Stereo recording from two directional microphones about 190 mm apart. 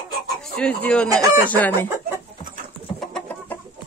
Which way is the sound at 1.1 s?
20° right (ahead or behind).